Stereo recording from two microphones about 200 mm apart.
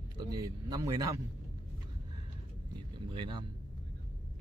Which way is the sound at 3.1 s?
25° right (ahead or behind).